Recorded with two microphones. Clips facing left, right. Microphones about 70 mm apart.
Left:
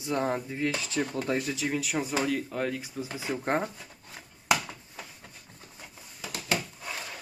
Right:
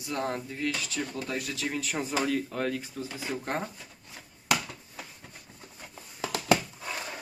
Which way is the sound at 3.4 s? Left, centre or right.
Left.